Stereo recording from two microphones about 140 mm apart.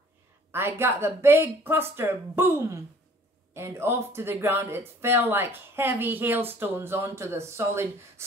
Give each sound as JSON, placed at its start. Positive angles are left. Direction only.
{"t": 0.5, "sound": "speech", "side_deg": -15}